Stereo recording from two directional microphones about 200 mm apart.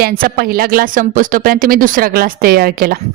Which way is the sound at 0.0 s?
45° right (ahead or behind).